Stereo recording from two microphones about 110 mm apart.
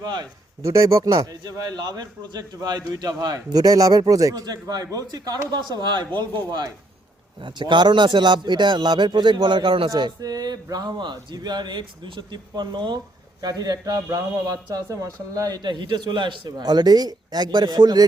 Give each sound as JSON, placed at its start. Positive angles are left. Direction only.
{"t": 0.0, "sound": "speech", "side_deg": -40}
{"t": 0.6, "sound": "speech", "side_deg": -30}
{"t": 9.9, "sound": "speech", "side_deg": -35}